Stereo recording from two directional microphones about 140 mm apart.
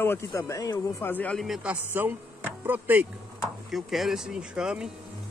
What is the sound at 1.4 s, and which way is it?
A man's voice, 5° right (ahead or behind).